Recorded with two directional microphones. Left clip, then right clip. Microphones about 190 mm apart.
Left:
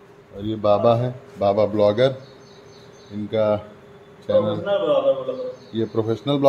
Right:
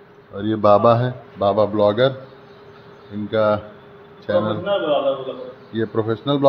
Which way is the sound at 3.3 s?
10° right (ahead or behind).